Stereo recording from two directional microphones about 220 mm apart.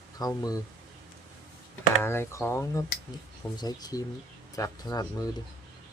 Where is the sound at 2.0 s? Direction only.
10° left (ahead or behind).